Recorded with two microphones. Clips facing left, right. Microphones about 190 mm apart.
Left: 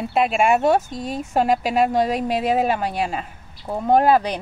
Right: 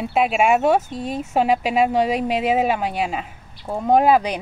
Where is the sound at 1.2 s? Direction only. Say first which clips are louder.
Even; 5° right (ahead or behind).